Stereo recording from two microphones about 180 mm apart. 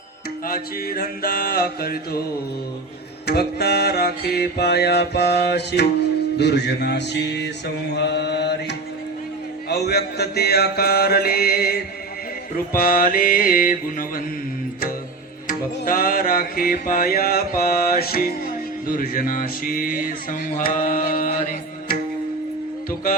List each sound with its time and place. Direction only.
0.4 s music: 55° left (ahead or behind)
3.2 s music: 65° left (ahead or behind)
7.9 s mantra: 70° left (ahead or behind)
9.6 s music: 65° left (ahead or behind)
12.7 s speech: 55° left (ahead or behind)
15.4 s music: 50° left (ahead or behind)
18.9 s speech: 50° left (ahead or behind)